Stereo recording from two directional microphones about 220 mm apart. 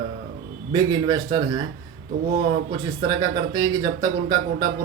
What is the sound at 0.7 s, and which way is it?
Speech, 20° right (ahead or behind).